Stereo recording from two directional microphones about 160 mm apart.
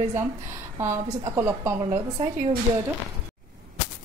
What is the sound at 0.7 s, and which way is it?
A woman's voice, 15° right (ahead or behind).